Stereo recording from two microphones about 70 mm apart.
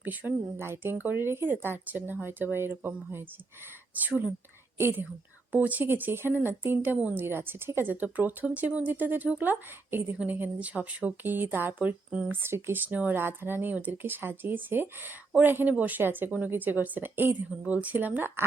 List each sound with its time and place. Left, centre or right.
0.0 s speech: right
12.3 s speech: right